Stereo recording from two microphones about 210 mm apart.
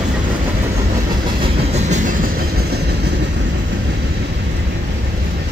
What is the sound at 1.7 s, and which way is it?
Train, 35° right (ahead or behind).